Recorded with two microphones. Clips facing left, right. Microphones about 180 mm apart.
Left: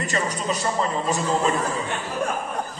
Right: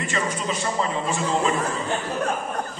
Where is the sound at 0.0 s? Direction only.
40° left (ahead or behind).